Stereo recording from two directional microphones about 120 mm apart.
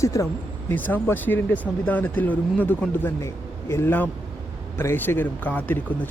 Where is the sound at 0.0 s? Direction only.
25° left (ahead or behind).